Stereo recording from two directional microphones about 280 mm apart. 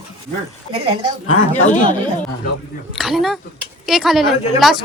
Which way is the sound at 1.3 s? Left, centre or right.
Left.